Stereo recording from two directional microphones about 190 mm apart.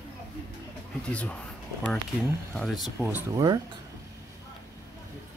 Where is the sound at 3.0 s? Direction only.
20° right (ahead or behind).